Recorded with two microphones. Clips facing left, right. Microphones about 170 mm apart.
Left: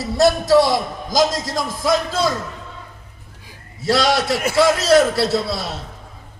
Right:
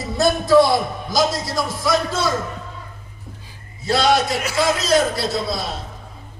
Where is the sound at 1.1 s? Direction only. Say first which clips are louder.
Left 2 dB; 90° left.